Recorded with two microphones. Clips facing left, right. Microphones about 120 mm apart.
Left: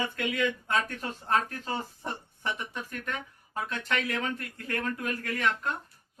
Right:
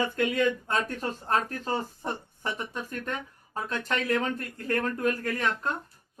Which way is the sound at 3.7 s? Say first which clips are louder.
Right 5 dB; 35° right (ahead or behind).